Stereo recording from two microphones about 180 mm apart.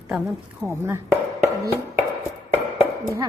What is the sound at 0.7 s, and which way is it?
Speech, 15° right (ahead or behind).